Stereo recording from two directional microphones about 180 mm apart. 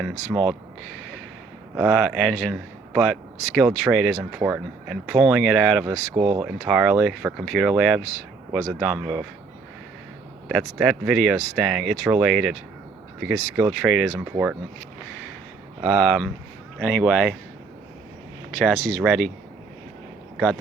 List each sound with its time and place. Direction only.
0.3 s speech: 15° right (ahead or behind)
1.7 s a man's voice: centre (ahead or behind)
4.4 s a man's voice: 10° right (ahead or behind)
6.1 s speech: 30° right (ahead or behind)
6.4 s a man's voice: 5° right (ahead or behind)
10.5 s a man's voice: 5° right (ahead or behind)
16.0 s a man's voice: 5° left (ahead or behind)
18.5 s a man's voice: centre (ahead or behind)